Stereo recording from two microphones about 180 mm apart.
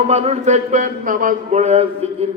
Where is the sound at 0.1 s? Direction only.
35° right (ahead or behind).